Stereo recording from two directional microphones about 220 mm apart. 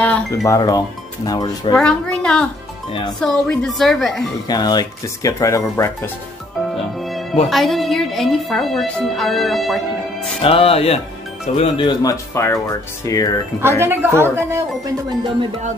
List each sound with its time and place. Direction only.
0.0 s dishes: 5° left (ahead or behind)
0.5 s speech: 15° left (ahead or behind)
1.8 s speech: 5° left (ahead or behind)
4.5 s speech: 20° left (ahead or behind)
7.4 s speech: centre (ahead or behind)
10.4 s speech: 25° left (ahead or behind)
13.6 s speech: 10° right (ahead or behind)